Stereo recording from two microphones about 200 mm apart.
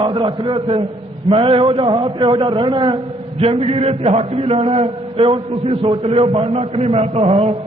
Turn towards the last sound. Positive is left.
turn(degrees=-30)  # may be behind; listen again after turning